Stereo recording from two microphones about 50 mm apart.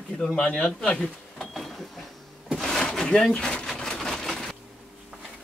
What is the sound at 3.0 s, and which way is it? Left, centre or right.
Speech, centre.